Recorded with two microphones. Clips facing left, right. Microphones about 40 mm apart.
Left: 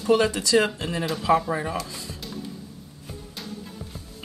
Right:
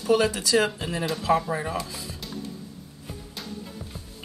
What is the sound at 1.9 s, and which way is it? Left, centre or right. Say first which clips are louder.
Music: even; centre.